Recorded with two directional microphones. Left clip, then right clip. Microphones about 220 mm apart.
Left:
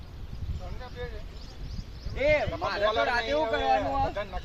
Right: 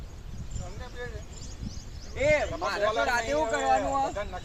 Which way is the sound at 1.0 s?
20° right (ahead or behind).